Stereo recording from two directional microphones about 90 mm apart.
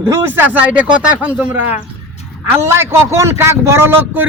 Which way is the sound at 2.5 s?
30° right (ahead or behind).